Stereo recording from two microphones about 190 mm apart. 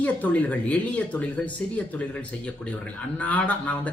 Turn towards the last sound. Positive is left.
turn(degrees=5)  # may be behind; listen again after turning